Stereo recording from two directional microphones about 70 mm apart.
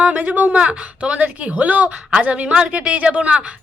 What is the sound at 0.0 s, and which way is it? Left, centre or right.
Speech, centre.